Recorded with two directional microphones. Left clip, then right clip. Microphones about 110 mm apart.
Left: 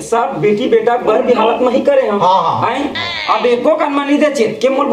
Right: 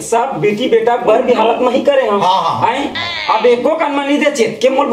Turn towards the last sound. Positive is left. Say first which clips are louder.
# right 1 dB
turn(degrees=15)  # may be behind; listen again after turning